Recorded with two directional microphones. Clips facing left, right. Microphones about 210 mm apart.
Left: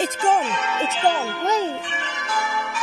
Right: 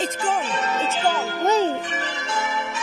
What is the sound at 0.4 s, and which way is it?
Speech, 35° right (ahead or behind).